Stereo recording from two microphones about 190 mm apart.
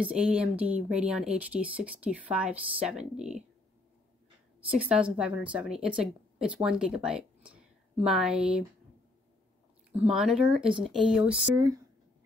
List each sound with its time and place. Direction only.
0.0 s speech: 5° right (ahead or behind)
4.7 s a woman's voice: 5° right (ahead or behind)
9.9 s a woman's voice: 5° right (ahead or behind)
11.5 s speech: 15° right (ahead or behind)